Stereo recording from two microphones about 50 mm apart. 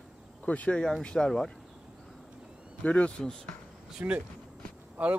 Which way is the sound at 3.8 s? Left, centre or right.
Centre.